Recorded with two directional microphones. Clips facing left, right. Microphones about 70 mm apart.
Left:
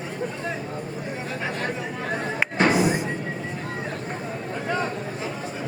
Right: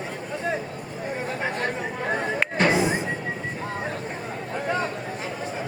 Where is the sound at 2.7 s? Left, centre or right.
Right.